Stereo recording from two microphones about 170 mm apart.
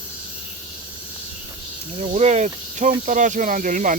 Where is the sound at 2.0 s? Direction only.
40° right (ahead or behind).